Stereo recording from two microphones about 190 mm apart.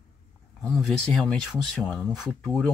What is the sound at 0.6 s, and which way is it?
Speech, 5° left (ahead or behind).